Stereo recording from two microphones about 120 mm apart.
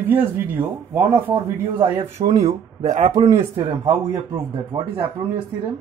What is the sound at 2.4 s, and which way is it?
Speech, 65° right (ahead or behind).